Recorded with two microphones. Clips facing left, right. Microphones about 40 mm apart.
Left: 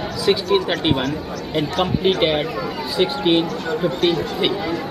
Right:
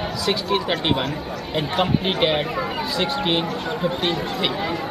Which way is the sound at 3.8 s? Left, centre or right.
Centre.